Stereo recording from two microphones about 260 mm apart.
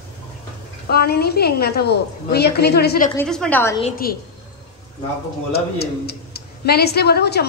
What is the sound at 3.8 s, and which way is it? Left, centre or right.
Speech, left.